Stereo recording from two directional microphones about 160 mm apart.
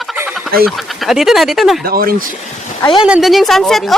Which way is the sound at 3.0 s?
5° right (ahead or behind).